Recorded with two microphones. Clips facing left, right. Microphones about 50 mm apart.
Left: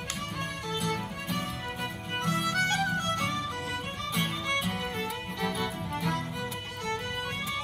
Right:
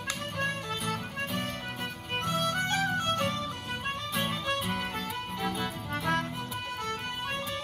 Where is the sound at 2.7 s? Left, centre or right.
Centre.